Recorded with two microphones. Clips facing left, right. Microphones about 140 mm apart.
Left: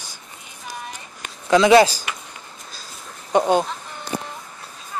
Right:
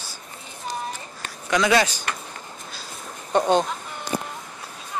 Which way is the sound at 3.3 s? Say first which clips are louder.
Left 2 dB; 10° left (ahead or behind).